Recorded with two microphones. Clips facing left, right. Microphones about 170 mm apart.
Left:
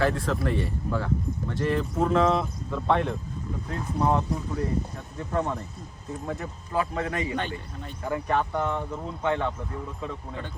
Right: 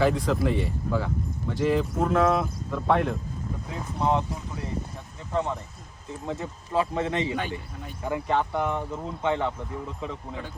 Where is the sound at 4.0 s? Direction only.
15° right (ahead or behind).